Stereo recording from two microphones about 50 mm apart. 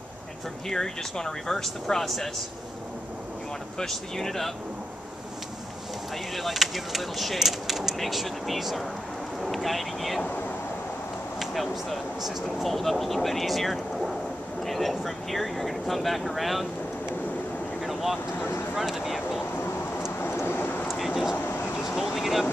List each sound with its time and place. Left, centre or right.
0.7 s speech: centre
3.7 s speech: centre
6.3 s speech: centre
11.3 s speech: centre
17.8 s vehicle: centre
18.8 s a sound: centre
20.2 s vehicle: left
20.9 s vehicle: centre
21.5 s vehicle: left
21.8 s a sound: centre